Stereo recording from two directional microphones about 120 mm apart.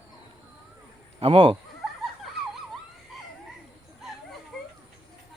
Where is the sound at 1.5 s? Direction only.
Centre (ahead or behind).